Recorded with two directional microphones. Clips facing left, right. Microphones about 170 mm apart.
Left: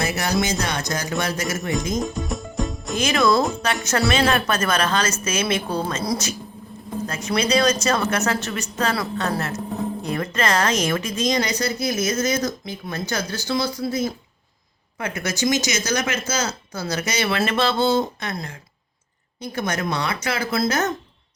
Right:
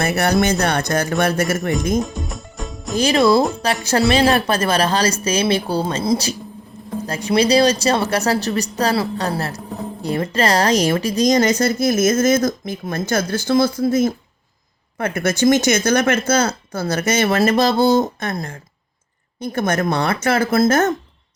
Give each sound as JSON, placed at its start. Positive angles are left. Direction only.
{"t": 0.0, "sound": "speech", "side_deg": -60}
{"t": 2.1, "sound": "music", "side_deg": 0}
{"t": 3.0, "sound": "speech", "side_deg": -30}